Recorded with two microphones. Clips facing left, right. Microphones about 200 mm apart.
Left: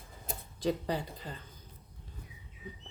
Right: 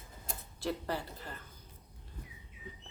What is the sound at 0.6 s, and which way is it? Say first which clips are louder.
Speech: left 4 dB; 15° left (ahead or behind).